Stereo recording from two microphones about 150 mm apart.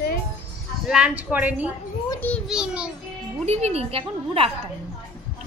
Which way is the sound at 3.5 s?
45° right (ahead or behind).